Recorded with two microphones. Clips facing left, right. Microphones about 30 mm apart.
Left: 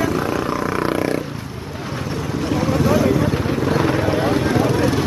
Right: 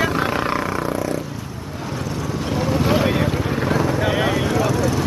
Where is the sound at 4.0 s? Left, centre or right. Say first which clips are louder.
Left 1 dB; right.